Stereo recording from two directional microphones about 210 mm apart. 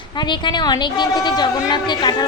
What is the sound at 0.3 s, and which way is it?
A woman's voice, 20° left (ahead or behind).